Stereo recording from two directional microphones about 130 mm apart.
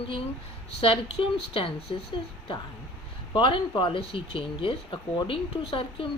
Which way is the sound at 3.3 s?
40° left (ahead or behind).